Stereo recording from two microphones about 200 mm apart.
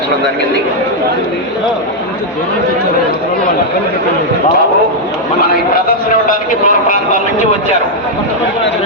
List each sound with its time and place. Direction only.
6.2 s a man's voice: 40° left (ahead or behind)